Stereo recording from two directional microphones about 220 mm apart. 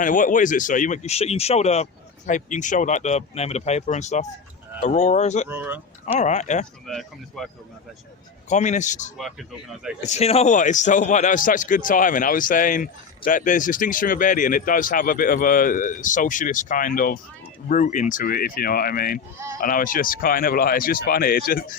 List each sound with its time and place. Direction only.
0.0 s a man's voice: 35° left (ahead or behind)
5.5 s speech: 10° right (ahead or behind)
6.1 s a man's voice: 30° left (ahead or behind)
6.8 s speech: centre (ahead or behind)
8.4 s a man's voice: 30° left (ahead or behind)
9.1 s speech: centre (ahead or behind)
10.0 s a man's voice: 30° left (ahead or behind)